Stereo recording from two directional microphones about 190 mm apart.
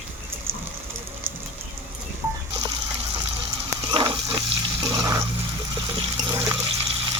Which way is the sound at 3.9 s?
25° right (ahead or behind).